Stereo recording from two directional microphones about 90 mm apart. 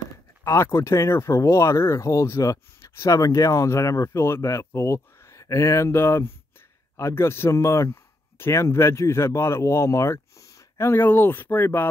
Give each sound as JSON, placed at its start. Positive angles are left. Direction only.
{"t": 0.4, "sound": "speech", "side_deg": 30}